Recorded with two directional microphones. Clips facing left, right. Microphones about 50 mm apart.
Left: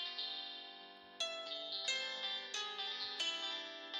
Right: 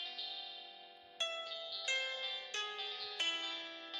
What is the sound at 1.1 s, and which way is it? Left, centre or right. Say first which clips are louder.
Music: right 3 dB; right.